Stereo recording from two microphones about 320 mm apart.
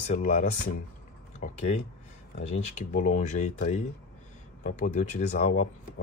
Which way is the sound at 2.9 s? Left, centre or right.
Left.